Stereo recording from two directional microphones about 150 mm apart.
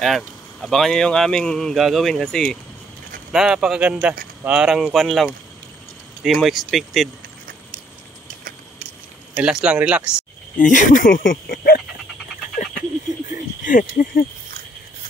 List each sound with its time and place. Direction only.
0.0 s speech: centre (ahead or behind)
9.3 s speech: 5° right (ahead or behind)
10.6 s speech: 60° left (ahead or behind); by 11.8 s 75° left (ahead or behind)
13.7 s speech: 60° left (ahead or behind)